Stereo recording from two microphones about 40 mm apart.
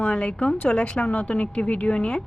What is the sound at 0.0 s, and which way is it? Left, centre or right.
Speech, left.